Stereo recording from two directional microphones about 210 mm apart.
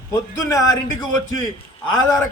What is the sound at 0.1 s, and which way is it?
Speech, 15° left (ahead or behind).